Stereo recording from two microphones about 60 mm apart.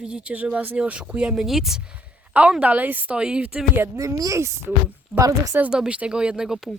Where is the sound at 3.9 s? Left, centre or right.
Right.